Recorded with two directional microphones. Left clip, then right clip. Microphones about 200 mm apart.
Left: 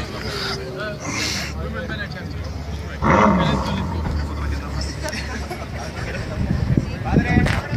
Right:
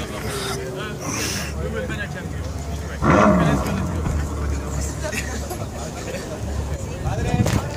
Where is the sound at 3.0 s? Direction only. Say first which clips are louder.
Even; 45° right (ahead or behind).